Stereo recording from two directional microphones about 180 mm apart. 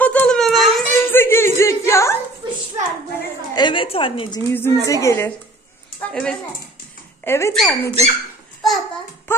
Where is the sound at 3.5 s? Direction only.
25° left (ahead or behind).